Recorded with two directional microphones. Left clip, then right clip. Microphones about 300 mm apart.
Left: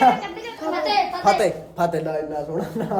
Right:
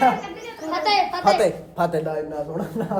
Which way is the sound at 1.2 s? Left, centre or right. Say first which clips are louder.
Even; centre.